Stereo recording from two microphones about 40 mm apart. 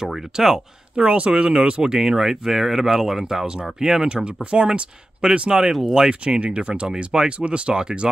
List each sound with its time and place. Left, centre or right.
0.1 s speech: centre
0.9 s speech: right; by 4.1 s centre
4.1 s speech: right
5.5 s speech: centre